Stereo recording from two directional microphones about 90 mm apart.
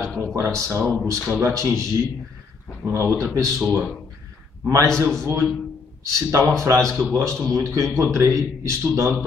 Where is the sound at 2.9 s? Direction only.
35° right (ahead or behind).